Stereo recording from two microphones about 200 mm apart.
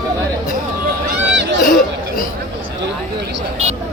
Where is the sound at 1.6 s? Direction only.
45° left (ahead or behind).